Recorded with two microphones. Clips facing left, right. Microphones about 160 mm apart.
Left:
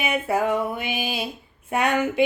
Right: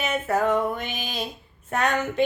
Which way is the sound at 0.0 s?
10° left (ahead or behind).